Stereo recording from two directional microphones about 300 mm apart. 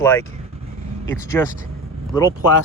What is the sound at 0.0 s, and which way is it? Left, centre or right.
Speech, centre.